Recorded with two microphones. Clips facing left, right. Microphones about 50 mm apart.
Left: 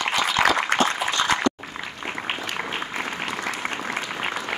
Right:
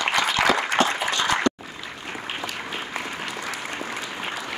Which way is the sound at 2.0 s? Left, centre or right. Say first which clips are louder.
Left 3 dB; left.